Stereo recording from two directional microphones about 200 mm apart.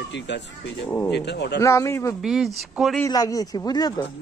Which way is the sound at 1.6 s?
15° left (ahead or behind).